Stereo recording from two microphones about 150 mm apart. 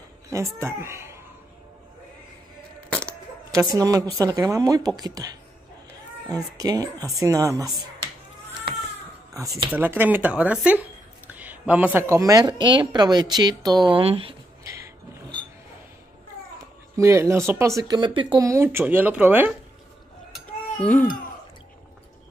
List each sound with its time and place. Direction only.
0.3 s speech: 20° right (ahead or behind)
2.9 s a sound: 5° left (ahead or behind)
3.5 s speech: 25° right (ahead or behind)
9.7 s speech: 10° right (ahead or behind); by 14.3 s 40° right (ahead or behind)
16.9 s speech: 20° right (ahead or behind)
20.8 s speech: 10° left (ahead or behind)